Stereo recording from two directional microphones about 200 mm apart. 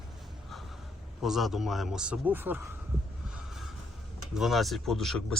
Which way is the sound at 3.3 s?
Centre (ahead or behind).